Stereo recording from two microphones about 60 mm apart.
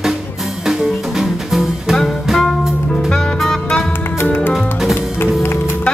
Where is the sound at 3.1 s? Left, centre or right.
Centre.